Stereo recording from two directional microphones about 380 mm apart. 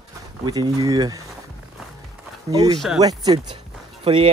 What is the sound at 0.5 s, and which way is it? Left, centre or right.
Speech, centre.